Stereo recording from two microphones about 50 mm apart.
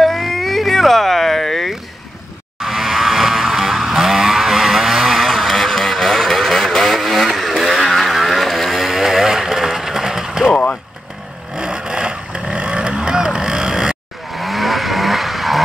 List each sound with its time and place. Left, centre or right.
0.0 s a sound: centre
2.6 s a sound: centre
7.2 s vehicle: centre
10.5 s vehicle: left
11.5 s vehicle: centre
14.3 s vehicle: centre